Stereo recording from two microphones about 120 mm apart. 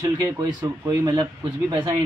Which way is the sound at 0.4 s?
35° right (ahead or behind).